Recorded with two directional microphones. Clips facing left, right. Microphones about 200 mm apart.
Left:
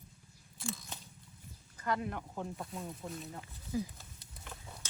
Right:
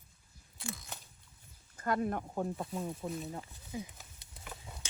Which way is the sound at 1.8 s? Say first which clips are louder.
Right 3 dB; 50° right (ahead or behind).